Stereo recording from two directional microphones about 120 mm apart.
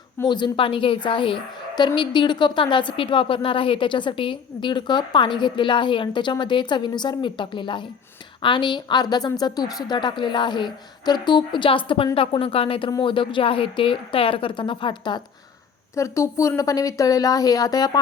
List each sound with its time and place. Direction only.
0.3 s a woman's voice: 40° left (ahead or behind)
16.0 s a woman's voice: 25° left (ahead or behind)